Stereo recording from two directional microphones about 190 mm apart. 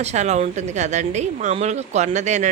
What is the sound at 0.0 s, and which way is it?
Speech, 35° right (ahead or behind).